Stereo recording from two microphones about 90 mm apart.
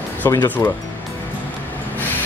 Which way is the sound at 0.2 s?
35° left (ahead or behind).